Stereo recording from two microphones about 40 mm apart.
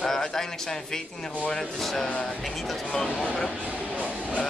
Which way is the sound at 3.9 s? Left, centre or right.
Right.